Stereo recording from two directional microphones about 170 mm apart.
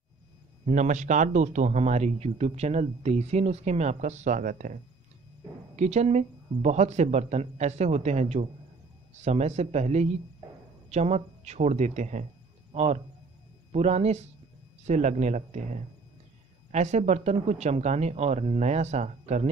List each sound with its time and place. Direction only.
0.7 s speech: 45° right (ahead or behind)
5.8 s speech: 40° right (ahead or behind)